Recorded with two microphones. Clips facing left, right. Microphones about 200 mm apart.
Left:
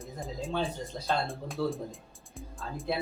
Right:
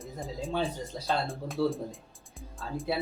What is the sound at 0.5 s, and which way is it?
Speech, 10° right (ahead or behind).